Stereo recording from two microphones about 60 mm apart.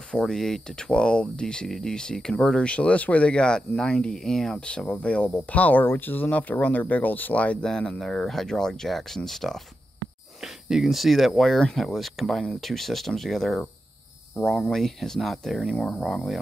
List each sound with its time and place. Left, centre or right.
0.1 s speech: centre; by 7.5 s left
7.6 s speech: centre